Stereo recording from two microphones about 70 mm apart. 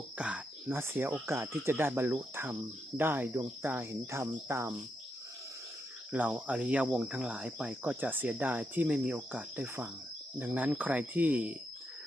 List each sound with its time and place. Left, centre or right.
0.2 s a sound: centre
0.7 s cricket: right
6.1 s cricket: right